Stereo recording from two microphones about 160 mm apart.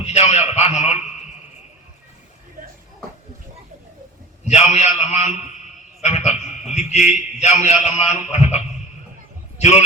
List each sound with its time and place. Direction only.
0.0 s a man's voice: 45° left (ahead or behind)
4.4 s a man's voice: 45° left (ahead or behind)
9.6 s a man's voice: 45° left (ahead or behind)